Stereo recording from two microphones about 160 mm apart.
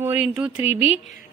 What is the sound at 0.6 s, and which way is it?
Speech, 35° left (ahead or behind).